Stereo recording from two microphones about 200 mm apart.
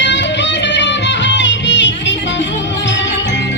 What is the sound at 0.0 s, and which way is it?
Music, 60° left (ahead or behind).